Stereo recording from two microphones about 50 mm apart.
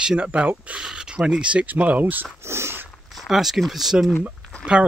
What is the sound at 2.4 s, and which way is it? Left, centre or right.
Dog, right.